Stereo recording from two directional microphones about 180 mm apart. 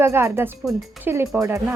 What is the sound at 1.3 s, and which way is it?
Speech, 15° right (ahead or behind).